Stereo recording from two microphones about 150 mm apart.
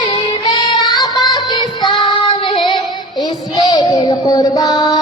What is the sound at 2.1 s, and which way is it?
Child singing, 30° left (ahead or behind).